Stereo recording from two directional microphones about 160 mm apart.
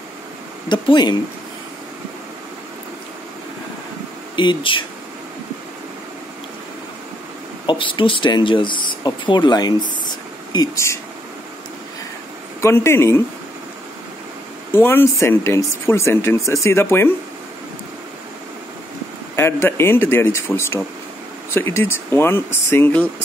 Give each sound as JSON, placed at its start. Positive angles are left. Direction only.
{"t": 0.7, "sound": "speech", "side_deg": 30}
{"t": 4.4, "sound": "speech", "side_deg": 30}
{"t": 7.6, "sound": "speech", "side_deg": 30}
{"t": 12.6, "sound": "speech", "side_deg": 15}
{"t": 14.7, "sound": "speech", "side_deg": 15}
{"t": 19.3, "sound": "speech", "side_deg": 15}